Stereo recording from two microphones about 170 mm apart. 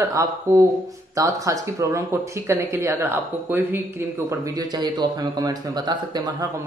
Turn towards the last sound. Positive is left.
turn(degrees=-25)  # may be behind; listen again after turning